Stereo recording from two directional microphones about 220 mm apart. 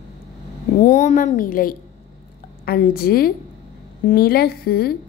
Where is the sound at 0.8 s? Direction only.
35° left (ahead or behind).